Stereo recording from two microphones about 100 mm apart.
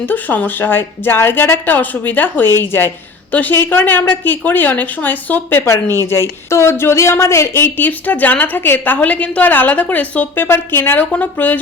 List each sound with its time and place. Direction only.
0.0 s speech: 20° left (ahead or behind)